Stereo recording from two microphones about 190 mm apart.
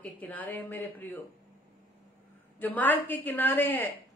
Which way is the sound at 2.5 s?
10° left (ahead or behind).